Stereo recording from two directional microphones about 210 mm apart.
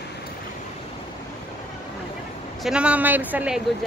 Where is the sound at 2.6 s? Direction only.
5° right (ahead or behind).